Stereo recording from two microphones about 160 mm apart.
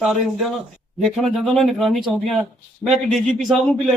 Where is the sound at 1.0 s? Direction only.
Centre (ahead or behind).